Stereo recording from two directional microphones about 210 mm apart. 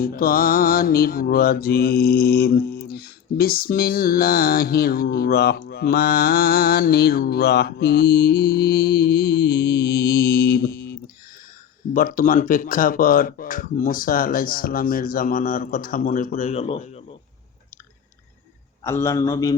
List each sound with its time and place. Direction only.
0.0 s a sound: 45° left (ahead or behind)
11.9 s speech: 40° left (ahead or behind)
18.8 s a man's voice: 15° left (ahead or behind)